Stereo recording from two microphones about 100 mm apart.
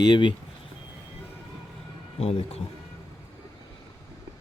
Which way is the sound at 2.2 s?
90° left.